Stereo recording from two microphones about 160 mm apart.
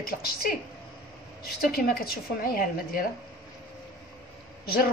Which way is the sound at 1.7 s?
70° left (ahead or behind).